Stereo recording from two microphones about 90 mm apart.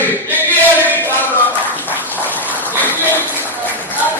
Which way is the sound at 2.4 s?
20° right (ahead or behind).